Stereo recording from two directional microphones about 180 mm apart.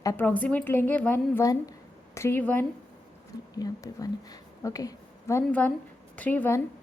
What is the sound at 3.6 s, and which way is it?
A woman's voice, 20° left (ahead or behind).